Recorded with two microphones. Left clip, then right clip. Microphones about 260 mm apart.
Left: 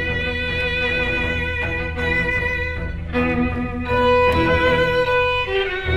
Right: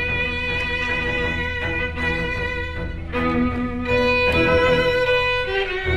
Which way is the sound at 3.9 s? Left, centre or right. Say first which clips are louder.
Left 2 dB; right.